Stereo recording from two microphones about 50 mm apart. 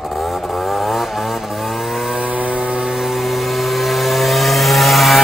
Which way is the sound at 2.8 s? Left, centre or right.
Centre.